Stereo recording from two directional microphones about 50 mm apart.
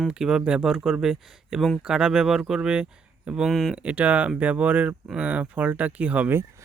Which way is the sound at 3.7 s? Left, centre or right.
Right.